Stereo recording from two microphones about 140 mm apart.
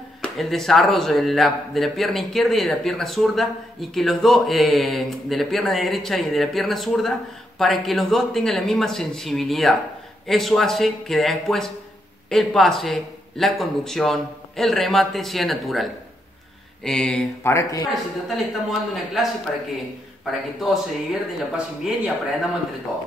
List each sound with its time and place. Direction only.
0.2 s speech: centre (ahead or behind)
16.8 s a sound: 5° left (ahead or behind)
17.4 s speech: 20° left (ahead or behind)
18.3 s speech: centre (ahead or behind)
20.2 s speech: centre (ahead or behind)